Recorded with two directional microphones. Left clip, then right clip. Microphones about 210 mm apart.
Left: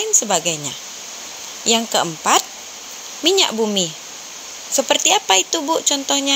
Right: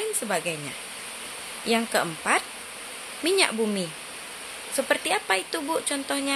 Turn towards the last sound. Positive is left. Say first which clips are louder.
# left 9 dB
turn(degrees=20)  # may be behind; listen again after turning